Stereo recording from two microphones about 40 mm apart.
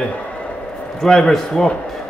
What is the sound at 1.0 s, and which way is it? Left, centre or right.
Speech, centre.